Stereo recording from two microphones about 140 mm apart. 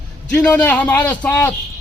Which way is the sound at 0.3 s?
10° left (ahead or behind).